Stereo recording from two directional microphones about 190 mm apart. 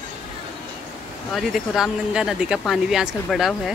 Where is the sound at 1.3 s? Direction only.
Centre (ahead or behind).